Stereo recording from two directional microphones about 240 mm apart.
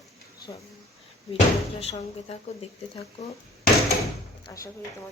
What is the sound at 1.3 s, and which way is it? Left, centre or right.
Speech, left.